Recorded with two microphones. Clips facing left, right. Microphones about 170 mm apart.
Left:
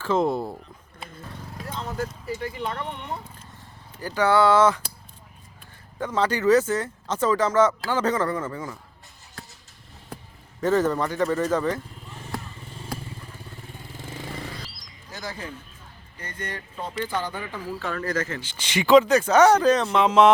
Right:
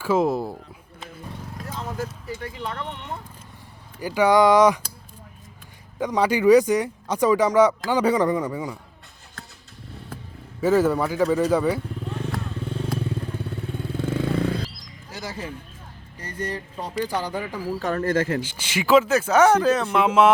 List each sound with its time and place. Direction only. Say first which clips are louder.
0.0 s speech: right 2 dB; 5° right (ahead or behind)
1.5 s speech: left 1 dB; centre (ahead or behind)
4.0 s speech: right 3 dB; 10° right (ahead or behind)
6.0 s speech: right 3 dB; 15° right (ahead or behind)
10.6 s speech: right 3 dB; 10° right (ahead or behind)
12.0 s vehicle: right 7 dB; 65° right (ahead or behind)
13.0 s motorcycle: right 12 dB; 65° right (ahead or behind)
16.2 s speech: right 5 dB; 30° right (ahead or behind)
17.1 s speech: right 2 dB; 10° right (ahead or behind)
17.7 s speech: right 5 dB; 40° right (ahead or behind)
18.4 s speech: left 1 dB; 10° right (ahead or behind)